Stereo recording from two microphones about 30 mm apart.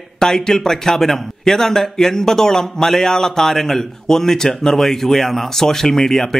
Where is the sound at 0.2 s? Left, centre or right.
Centre.